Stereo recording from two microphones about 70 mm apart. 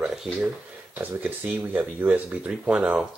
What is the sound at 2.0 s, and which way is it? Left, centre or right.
Speech, centre.